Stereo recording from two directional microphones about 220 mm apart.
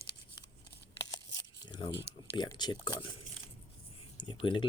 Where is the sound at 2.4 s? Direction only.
20° left (ahead or behind).